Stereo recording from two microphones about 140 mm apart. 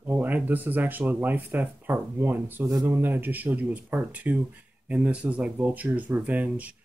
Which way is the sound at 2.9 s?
15° right (ahead or behind).